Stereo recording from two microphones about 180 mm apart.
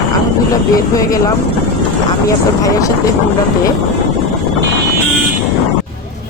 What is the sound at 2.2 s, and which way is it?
Speech, 20° left (ahead or behind).